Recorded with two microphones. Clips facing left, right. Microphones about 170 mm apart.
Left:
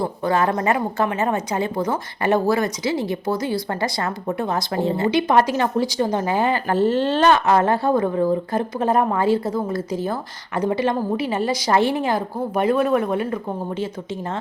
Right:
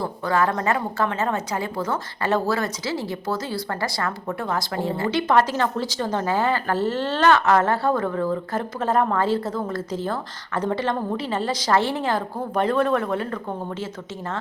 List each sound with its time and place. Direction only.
0.0 s a woman's voice: 20° left (ahead or behind)